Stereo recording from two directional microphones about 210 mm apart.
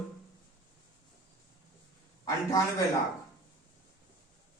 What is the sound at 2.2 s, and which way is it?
Speech, 15° left (ahead or behind).